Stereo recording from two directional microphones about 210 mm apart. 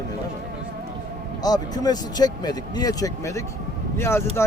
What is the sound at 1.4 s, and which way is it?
Speech, 20° left (ahead or behind).